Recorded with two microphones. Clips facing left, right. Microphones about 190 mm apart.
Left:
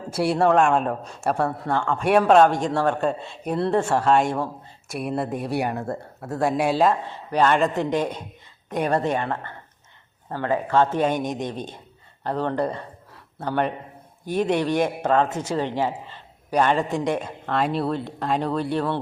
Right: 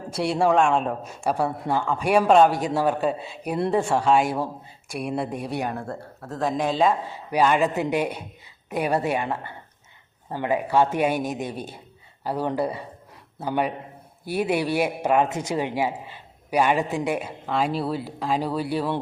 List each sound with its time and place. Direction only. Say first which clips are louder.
0.1 s a man's voice: left 2 dB; 5° left (ahead or behind)